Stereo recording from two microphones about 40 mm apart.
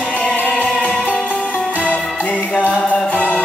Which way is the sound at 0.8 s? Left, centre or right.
Left.